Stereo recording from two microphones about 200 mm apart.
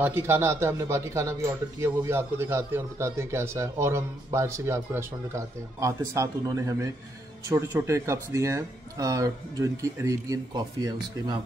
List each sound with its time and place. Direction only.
0.0 s speech: 10° right (ahead or behind)